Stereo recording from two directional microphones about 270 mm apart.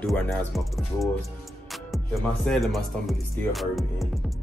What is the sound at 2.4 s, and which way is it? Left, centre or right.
Speech, centre.